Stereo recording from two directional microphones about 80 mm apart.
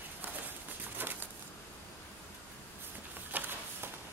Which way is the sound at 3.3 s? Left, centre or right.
Right.